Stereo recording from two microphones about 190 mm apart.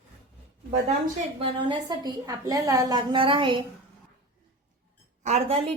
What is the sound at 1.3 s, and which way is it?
A woman's voice, 25° right (ahead or behind).